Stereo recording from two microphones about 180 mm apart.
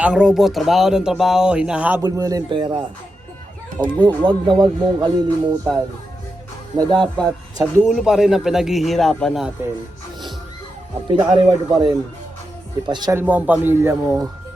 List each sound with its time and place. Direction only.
0.0 s speech: 5° right (ahead or behind)
2.0 s speech: 20° right (ahead or behind)
6.7 s speech: 25° right (ahead or behind)
7.2 s speech: 5° left (ahead or behind)
11.2 s speech: 20° right (ahead or behind)
13.1 s a man's voice: 10° right (ahead or behind)